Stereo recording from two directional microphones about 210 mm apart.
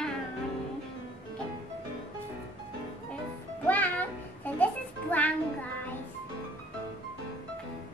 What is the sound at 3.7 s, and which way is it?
Music, 10° left (ahead or behind).